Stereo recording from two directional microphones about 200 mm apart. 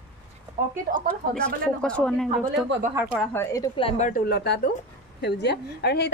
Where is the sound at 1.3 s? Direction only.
5° left (ahead or behind).